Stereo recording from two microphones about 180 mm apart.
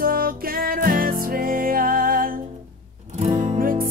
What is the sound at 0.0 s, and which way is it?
Music, 55° right (ahead or behind).